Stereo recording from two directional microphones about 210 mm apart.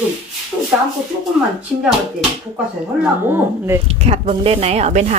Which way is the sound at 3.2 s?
10° right (ahead or behind).